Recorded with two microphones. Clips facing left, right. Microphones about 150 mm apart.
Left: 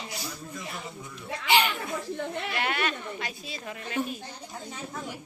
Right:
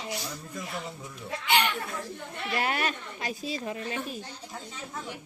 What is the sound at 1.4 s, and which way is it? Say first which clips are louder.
Speech: left 2 dB; 5° left (ahead or behind).